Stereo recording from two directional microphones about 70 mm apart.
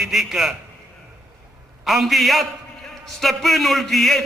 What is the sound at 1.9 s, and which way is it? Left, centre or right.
A man's voice, centre.